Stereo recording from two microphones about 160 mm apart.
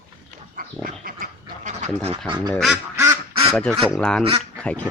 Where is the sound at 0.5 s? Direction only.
60° right (ahead or behind).